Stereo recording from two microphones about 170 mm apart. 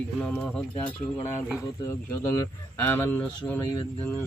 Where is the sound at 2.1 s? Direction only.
20° left (ahead or behind).